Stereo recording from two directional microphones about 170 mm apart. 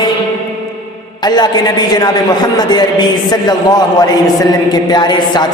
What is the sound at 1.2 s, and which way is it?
A man's voice, 25° left (ahead or behind).